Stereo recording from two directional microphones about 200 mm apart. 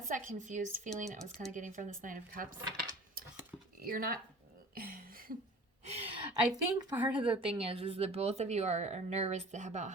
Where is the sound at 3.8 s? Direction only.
45° right (ahead or behind).